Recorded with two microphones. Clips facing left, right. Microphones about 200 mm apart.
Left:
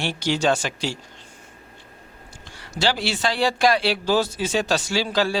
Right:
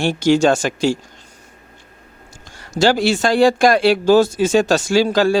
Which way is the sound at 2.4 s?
45° right (ahead or behind).